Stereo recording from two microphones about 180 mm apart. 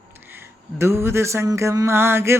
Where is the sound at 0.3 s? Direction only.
15° right (ahead or behind).